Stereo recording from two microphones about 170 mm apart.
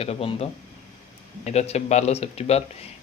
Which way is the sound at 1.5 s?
40° left (ahead or behind).